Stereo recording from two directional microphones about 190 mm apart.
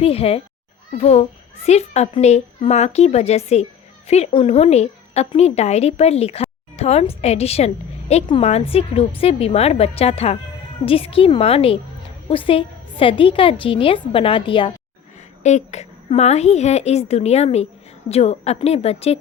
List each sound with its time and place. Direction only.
0.0 s a child's voice: 30° left (ahead or behind)
15.4 s a child's voice: 35° left (ahead or behind)